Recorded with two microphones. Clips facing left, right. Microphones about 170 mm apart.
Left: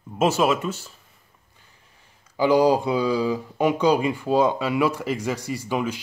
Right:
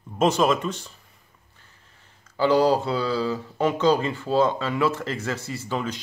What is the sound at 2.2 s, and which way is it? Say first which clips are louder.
Speech: left 1 dB; 15° left (ahead or behind).